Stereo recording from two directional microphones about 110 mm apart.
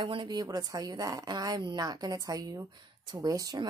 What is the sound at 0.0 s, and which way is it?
A woman's voice, 45° right (ahead or behind).